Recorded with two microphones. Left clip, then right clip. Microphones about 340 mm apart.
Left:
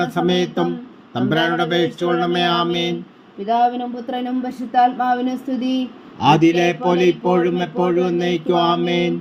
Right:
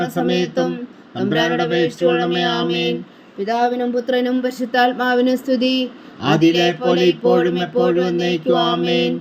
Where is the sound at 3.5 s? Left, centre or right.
Right.